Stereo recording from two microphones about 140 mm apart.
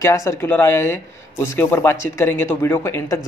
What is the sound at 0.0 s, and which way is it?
Speech, 20° left (ahead or behind).